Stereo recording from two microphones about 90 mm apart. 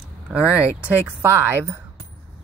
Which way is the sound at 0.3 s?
15° right (ahead or behind).